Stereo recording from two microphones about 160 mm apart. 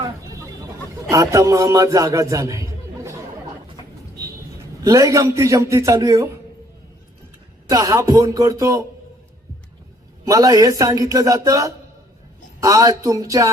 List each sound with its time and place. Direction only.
0.0 s a sound: 20° right (ahead or behind)
1.1 s a man's voice: 20° right (ahead or behind)
4.8 s a man's voice: 20° right (ahead or behind)
7.7 s a man's voice: 20° right (ahead or behind)
10.2 s a man's voice: 20° right (ahead or behind)